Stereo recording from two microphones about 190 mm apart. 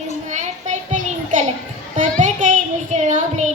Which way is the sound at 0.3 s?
40° right (ahead or behind).